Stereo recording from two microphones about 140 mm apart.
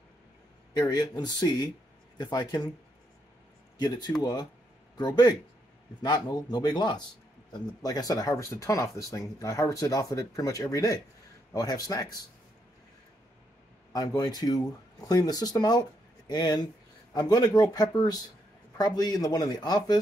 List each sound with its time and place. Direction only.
0.7 s speech: 30° left (ahead or behind)
3.7 s speech: 30° left (ahead or behind)
13.9 s speech: 25° left (ahead or behind)